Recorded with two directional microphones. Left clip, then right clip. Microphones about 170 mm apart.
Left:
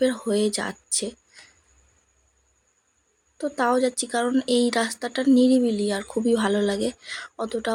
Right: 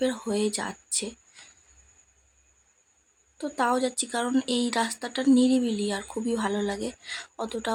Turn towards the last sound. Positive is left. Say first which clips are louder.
# left 4 dB
turn(degrees=5)  # may be behind; listen again after turning